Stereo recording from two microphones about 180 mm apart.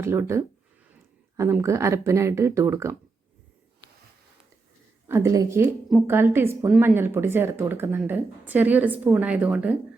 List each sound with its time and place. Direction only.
0.0 s speech: 15° right (ahead or behind)
5.0 s speech: 15° right (ahead or behind)